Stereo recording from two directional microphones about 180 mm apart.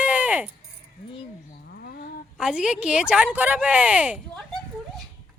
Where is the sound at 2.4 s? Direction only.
5° right (ahead or behind).